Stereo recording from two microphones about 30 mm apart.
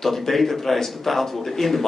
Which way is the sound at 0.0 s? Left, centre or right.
Centre.